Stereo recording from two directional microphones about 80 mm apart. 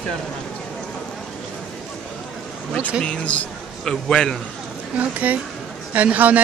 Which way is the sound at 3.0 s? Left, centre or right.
Centre.